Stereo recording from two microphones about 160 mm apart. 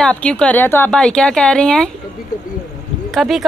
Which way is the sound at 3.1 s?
Centre (ahead or behind).